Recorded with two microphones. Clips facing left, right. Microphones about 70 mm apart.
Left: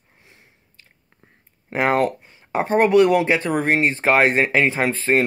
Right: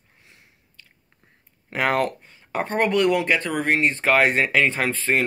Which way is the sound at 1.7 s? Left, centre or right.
Left.